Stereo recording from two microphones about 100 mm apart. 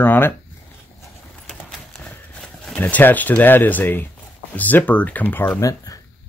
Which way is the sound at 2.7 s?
15° left (ahead or behind).